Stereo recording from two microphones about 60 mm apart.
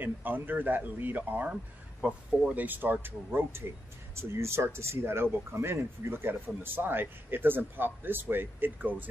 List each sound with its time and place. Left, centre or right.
0.0 s speech: right
1.5 s speech: centre
2.5 s speech: right